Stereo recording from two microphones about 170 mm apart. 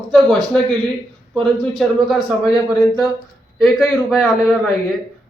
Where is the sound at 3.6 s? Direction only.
Centre (ahead or behind).